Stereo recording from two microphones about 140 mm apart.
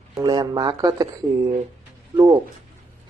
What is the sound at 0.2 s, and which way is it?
Speech, 30° right (ahead or behind).